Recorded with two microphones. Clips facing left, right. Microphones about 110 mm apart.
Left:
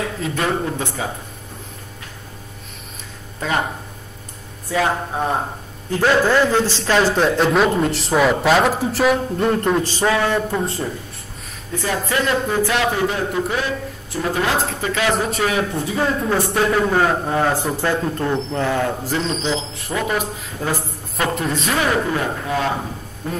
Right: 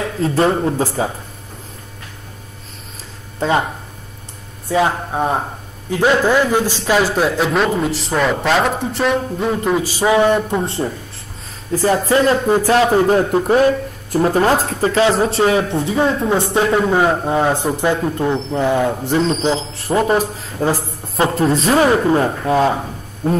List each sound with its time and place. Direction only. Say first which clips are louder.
0.2 s speech: right 8 dB; 30° right (ahead or behind)
3.3 s speech: right 5 dB; 30° right (ahead or behind)
4.6 s a man's voice: right 3 dB; 20° right (ahead or behind)
10.1 s speech: right 5 dB; 20° right (ahead or behind)
11.7 s speech: right 7 dB; 35° right (ahead or behind)